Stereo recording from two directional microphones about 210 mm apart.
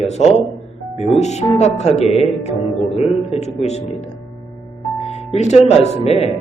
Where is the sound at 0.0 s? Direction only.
30° left (ahead or behind).